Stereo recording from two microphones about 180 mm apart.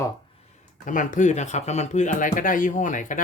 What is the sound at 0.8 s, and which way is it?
Speech, 45° left (ahead or behind).